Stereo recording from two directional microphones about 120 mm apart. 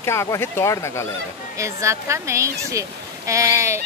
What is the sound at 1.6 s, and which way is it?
Speech, 25° right (ahead or behind).